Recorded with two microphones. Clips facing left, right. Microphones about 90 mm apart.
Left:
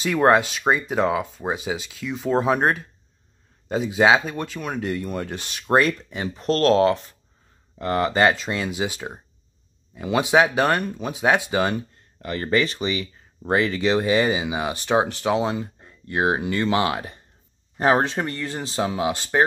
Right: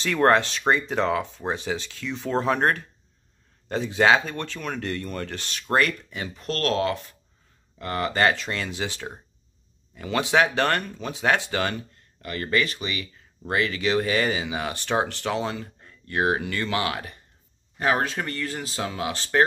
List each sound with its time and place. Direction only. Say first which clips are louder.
0.0 s speech: left 2 dB; 10° left (ahead or behind)